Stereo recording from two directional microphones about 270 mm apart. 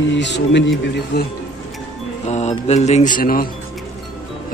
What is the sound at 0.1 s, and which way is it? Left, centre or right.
Speech, left.